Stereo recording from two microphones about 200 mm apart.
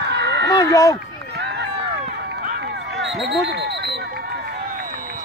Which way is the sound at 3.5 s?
50° right (ahead or behind).